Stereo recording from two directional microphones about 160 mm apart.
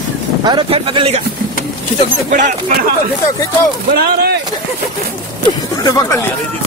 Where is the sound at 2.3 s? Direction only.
55° right (ahead or behind).